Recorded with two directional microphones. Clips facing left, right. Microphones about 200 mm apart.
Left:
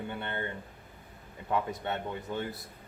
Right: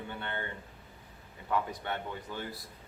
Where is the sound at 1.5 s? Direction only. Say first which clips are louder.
Left 2 dB; 25° left (ahead or behind).